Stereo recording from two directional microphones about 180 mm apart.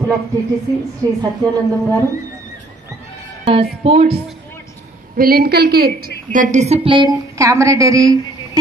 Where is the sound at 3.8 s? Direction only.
35° right (ahead or behind).